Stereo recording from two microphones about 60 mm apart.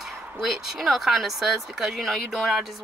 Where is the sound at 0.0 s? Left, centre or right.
Centre.